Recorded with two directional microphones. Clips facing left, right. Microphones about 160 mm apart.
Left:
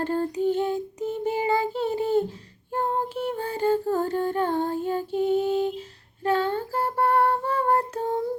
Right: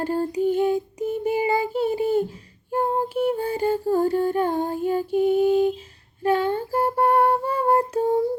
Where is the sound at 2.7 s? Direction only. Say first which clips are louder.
Right 4 dB; 10° right (ahead or behind).